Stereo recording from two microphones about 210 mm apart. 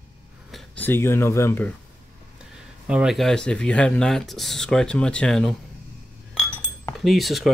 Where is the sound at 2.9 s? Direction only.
5° right (ahead or behind).